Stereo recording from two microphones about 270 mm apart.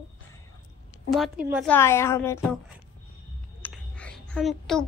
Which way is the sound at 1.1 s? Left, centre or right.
Centre.